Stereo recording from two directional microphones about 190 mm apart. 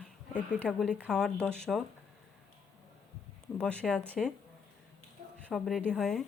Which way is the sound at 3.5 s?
5° left (ahead or behind).